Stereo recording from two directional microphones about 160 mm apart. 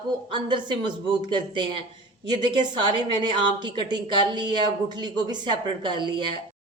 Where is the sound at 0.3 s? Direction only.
30° right (ahead or behind).